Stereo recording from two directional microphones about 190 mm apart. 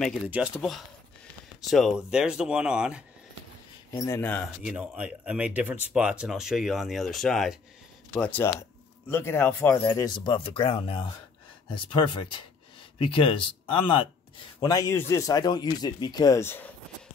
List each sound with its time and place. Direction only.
0.0 s speech: 5° right (ahead or behind)
3.9 s speech: 15° left (ahead or behind)
4.6 s speech: 5° right (ahead or behind); by 9.8 s 10° left (ahead or behind)
9.8 s speech: 20° left (ahead or behind)